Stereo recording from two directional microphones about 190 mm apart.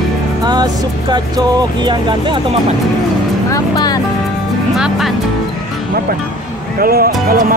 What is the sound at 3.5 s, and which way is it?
Speech, 20° left (ahead or behind).